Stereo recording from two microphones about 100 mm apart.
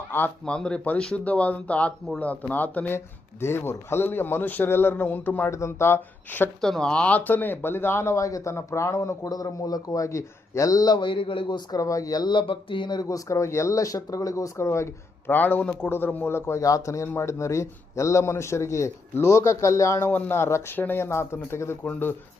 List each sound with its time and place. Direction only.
0.4 s speech: 10° left (ahead or behind)
5.5 s speech: 30° left (ahead or behind)
6.6 s speech: 5° left (ahead or behind); by 11.8 s 50° left (ahead or behind)
11.8 s speech: 35° left (ahead or behind); by 13.0 s 55° left (ahead or behind)
13.0 s speech: 35° left (ahead or behind)
15.3 s speech: 20° left (ahead or behind)